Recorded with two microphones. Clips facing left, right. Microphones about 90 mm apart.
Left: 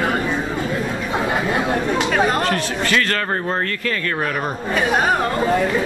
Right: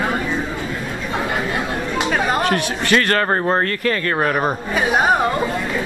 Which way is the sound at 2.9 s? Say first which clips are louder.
Right 4 dB; 55° right (ahead or behind).